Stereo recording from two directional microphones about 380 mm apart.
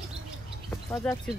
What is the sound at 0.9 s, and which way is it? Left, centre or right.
Speech, centre.